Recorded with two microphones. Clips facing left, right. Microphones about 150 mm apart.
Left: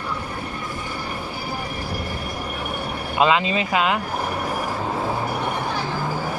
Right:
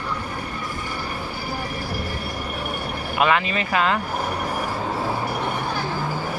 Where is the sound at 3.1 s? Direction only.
25° left (ahead or behind).